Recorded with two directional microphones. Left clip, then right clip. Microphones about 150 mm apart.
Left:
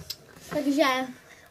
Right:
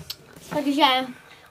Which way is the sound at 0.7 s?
Centre (ahead or behind).